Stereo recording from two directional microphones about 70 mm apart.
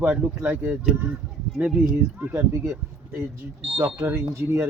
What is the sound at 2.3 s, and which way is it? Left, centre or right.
Speech, right.